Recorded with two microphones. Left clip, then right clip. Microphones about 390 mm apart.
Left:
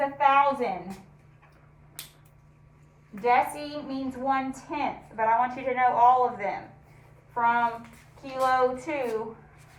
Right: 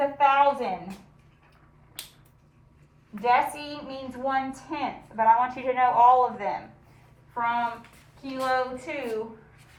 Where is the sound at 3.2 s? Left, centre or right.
Centre.